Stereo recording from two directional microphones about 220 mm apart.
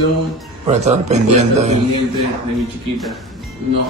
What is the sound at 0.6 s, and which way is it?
A man's voice, 30° right (ahead or behind).